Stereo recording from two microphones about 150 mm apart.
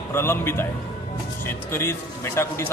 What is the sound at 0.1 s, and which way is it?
Speech, 15° left (ahead or behind).